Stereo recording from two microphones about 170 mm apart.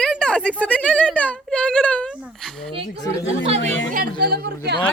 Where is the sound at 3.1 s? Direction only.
35° right (ahead or behind).